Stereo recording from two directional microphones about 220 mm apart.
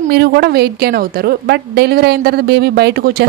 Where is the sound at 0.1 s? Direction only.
50° right (ahead or behind).